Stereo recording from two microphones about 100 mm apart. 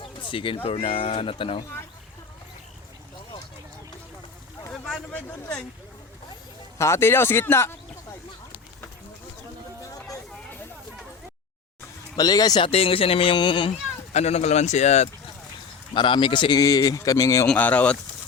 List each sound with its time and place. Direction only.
0.0 s speech: 60° left (ahead or behind)
4.7 s a sound: 10° left (ahead or behind)
6.7 s speech: 30° left (ahead or behind)
12.1 s speech: 40° left (ahead or behind)
12.6 s speech: 70° left (ahead or behind); by 15.1 s 90° left
16.0 s speech: 55° left (ahead or behind)
16.6 s speech: 40° left (ahead or behind)
17.5 s speech: 15° left (ahead or behind)